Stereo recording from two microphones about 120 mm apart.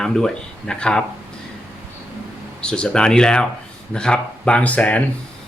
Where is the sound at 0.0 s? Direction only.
5° left (ahead or behind).